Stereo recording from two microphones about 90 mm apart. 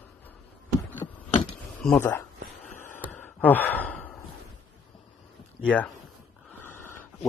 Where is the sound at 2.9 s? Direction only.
20° left (ahead or behind).